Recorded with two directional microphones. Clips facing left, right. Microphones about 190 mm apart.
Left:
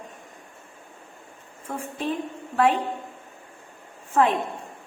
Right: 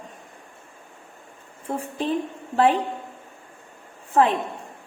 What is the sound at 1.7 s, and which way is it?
Speech, 30° right (ahead or behind).